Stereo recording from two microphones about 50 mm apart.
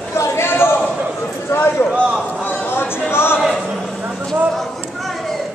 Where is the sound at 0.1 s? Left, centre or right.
Left.